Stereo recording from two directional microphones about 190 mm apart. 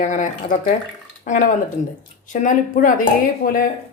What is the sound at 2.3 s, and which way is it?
Speech, 45° left (ahead or behind).